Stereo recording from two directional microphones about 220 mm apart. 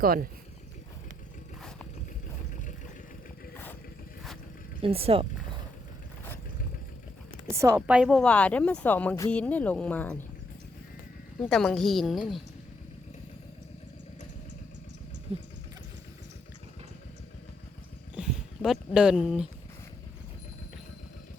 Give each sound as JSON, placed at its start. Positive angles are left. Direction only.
{"t": 0.0, "sound": "speech", "side_deg": -40}
{"t": 3.5, "sound": "vehicle", "side_deg": 10}
{"t": 4.8, "sound": "speech", "side_deg": -25}
{"t": 7.5, "sound": "a woman's voice", "side_deg": -10}
{"t": 11.4, "sound": "a woman's voice", "side_deg": 0}
{"t": 18.1, "sound": "a sound", "side_deg": -5}